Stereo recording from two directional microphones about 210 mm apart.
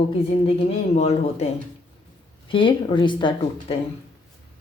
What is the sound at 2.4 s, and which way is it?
A woman's voice, 25° left (ahead or behind).